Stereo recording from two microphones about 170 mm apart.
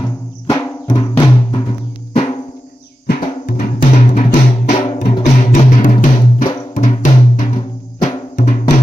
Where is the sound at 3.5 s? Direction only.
50° left (ahead or behind).